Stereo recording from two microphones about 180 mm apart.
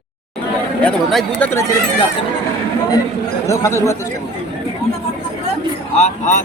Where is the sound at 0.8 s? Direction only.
5° left (ahead or behind).